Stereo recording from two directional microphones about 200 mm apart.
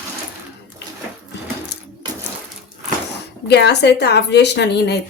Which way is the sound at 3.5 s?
55° left (ahead or behind).